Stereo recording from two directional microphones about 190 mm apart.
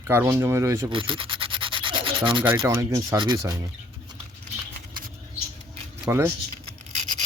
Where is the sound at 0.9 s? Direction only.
25° right (ahead or behind).